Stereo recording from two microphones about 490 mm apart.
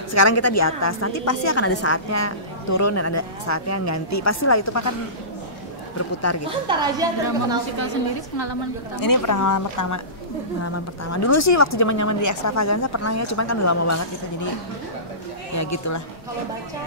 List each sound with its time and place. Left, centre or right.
0.1 s a woman's voice: left
6.7 s a woman's voice: centre
7.8 s a woman's voice: left
9.0 s a woman's voice: left
15.5 s a woman's voice: left